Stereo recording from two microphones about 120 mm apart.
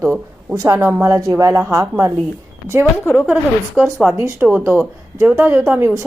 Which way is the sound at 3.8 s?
15° right (ahead or behind).